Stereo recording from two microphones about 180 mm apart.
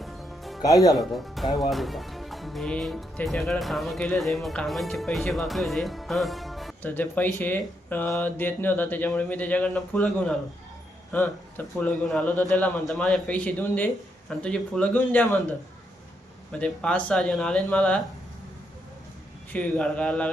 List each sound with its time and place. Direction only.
0.0 s music: centre (ahead or behind)
0.6 s speech: 20° left (ahead or behind)
0.9 s speech: centre (ahead or behind)
16.5 s speech: 5° left (ahead or behind)
19.5 s speech: 5° left (ahead or behind)